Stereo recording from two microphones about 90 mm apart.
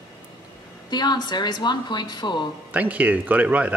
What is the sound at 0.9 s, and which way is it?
Speech, 55° left (ahead or behind).